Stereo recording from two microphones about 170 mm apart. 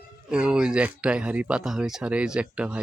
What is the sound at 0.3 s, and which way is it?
Speech, 5° right (ahead or behind).